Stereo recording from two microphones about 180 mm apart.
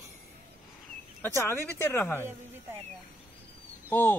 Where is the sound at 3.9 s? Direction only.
10° left (ahead or behind).